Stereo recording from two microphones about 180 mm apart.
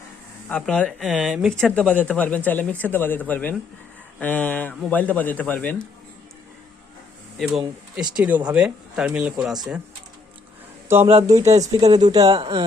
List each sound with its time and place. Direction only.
0.4 s speech: 5° left (ahead or behind)
7.3 s speech: centre (ahead or behind)
10.8 s speech: 15° right (ahead or behind)